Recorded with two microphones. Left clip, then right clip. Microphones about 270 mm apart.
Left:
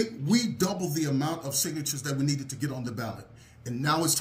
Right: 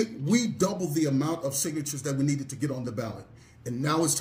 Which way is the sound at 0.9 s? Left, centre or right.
Centre.